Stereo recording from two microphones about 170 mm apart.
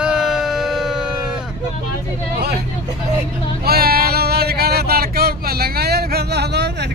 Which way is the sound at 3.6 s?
65° right (ahead or behind).